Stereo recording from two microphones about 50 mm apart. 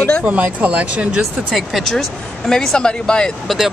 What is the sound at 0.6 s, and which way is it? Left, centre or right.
Speech, right.